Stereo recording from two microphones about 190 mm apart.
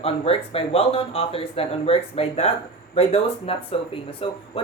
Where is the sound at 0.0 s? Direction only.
30° left (ahead or behind).